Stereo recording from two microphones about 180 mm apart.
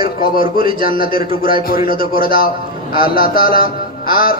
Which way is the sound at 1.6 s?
55° left (ahead or behind).